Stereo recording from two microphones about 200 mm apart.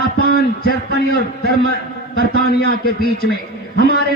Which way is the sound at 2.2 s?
50° left (ahead or behind).